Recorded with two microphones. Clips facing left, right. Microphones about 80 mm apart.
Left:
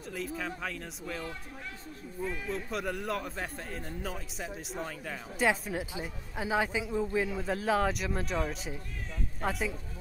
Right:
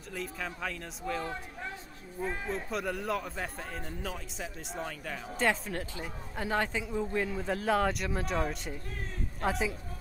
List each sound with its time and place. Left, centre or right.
0.1 s a man's voice: centre
2.2 s speech: right
2.5 s a man's voice: centre